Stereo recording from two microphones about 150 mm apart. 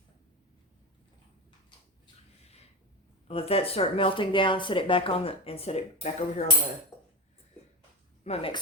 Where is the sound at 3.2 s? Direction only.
40° left (ahead or behind).